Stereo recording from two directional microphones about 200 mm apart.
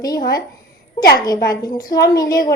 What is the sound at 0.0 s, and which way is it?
A woman's voice, 20° left (ahead or behind).